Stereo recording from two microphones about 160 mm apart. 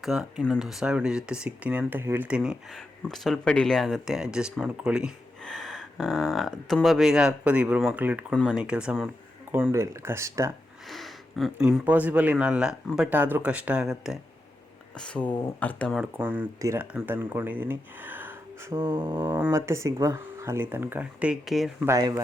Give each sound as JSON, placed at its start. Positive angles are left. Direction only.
{"t": 0.0, "sound": "speech", "side_deg": 0}
{"t": 10.8, "sound": "speech", "side_deg": 0}
{"t": 16.0, "sound": "speech", "side_deg": -10}
{"t": 21.8, "sound": "speech", "side_deg": -20}